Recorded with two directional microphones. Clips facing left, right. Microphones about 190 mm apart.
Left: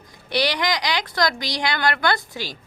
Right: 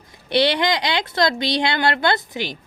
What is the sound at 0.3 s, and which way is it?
Speech, 25° right (ahead or behind).